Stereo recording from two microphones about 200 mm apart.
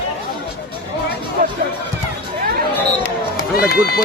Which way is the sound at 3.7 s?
50° left (ahead or behind).